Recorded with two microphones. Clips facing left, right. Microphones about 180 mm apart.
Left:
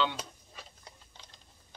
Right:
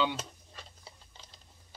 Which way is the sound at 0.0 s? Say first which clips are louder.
Right 1 dB; 5° right (ahead or behind).